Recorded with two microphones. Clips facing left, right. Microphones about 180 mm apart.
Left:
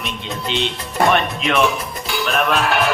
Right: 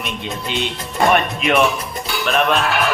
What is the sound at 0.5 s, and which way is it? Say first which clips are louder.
Speech: left 1 dB; 50° right (ahead or behind).